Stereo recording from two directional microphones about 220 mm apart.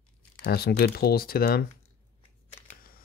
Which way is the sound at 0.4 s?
45° left (ahead or behind).